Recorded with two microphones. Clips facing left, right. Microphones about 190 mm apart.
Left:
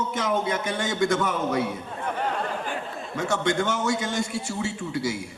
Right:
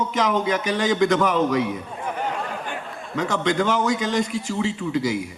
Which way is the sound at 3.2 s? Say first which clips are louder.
Right 2 dB; 90° right.